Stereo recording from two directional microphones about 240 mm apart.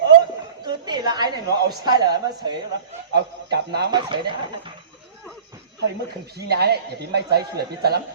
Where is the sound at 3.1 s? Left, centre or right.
Right.